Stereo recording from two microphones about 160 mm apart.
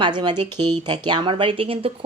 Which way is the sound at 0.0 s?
30° right (ahead or behind).